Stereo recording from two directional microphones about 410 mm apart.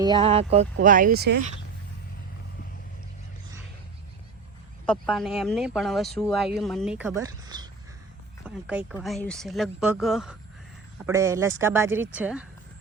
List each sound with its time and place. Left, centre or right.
0.0 s speech: centre
4.9 s speech: centre